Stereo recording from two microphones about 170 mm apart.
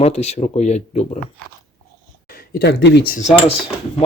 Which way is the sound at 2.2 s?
60° left (ahead or behind).